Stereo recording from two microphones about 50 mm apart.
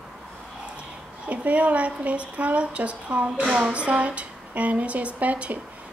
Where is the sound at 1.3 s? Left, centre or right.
Right.